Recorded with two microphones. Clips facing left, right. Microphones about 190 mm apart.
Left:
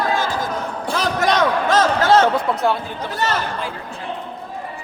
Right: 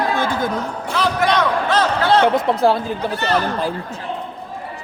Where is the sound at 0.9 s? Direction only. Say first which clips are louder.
Right 1 dB; 45° left (ahead or behind).